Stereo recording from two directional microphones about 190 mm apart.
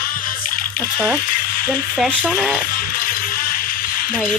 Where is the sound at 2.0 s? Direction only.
Centre (ahead or behind).